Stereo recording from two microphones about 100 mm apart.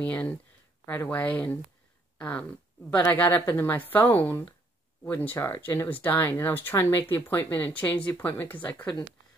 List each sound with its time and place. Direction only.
0.0 s speech: 15° left (ahead or behind)